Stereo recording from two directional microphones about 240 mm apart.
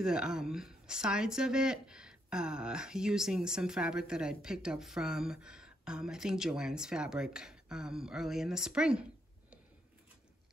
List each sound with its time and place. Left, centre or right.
0.0 s speech: centre